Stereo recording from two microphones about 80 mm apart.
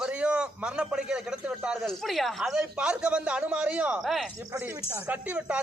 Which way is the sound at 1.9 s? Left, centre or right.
Centre.